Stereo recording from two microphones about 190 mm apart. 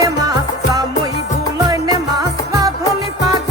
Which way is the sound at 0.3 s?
20° right (ahead or behind).